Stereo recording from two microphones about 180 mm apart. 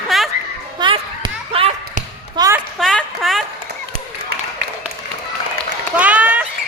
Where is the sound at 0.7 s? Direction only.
25° right (ahead or behind).